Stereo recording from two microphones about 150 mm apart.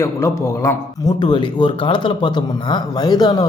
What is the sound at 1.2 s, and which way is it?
Speech, 30° left (ahead or behind).